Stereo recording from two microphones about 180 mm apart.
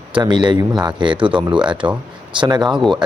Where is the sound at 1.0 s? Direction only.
25° right (ahead or behind).